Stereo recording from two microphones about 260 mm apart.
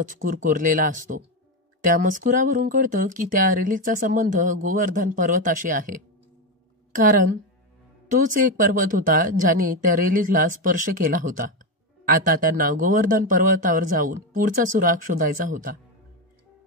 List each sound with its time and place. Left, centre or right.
0.0 s speech: right
8.1 s speech: right